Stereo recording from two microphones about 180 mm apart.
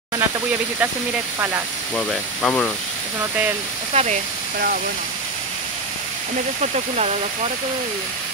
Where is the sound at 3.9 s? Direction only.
40° right (ahead or behind).